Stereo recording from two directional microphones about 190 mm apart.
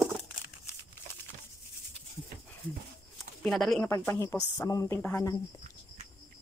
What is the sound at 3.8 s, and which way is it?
Speech, 15° left (ahead or behind).